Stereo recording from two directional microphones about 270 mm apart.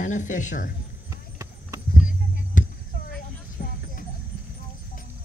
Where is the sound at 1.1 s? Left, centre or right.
Centre.